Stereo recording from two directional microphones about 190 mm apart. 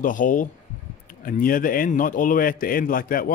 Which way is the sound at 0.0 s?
45° left (ahead or behind).